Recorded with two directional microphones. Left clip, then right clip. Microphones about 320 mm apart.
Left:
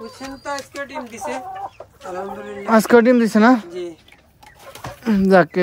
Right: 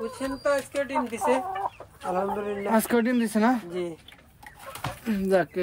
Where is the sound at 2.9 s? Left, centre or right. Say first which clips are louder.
Left 12 dB; left.